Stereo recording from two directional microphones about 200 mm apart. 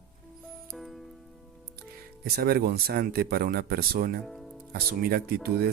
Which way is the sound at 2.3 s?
50° right (ahead or behind).